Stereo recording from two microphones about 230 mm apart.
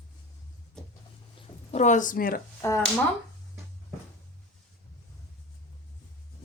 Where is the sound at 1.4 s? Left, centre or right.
Left.